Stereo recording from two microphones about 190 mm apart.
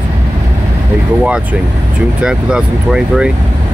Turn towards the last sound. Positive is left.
turn(degrees=-5)  # may be behind; listen again after turning